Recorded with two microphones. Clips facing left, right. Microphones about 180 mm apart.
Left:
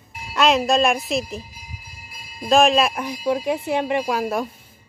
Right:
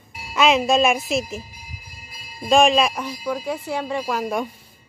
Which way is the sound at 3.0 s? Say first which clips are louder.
Left 4 dB; 20° left (ahead or behind).